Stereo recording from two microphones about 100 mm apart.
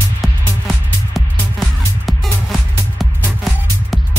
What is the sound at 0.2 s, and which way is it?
Music, centre (ahead or behind).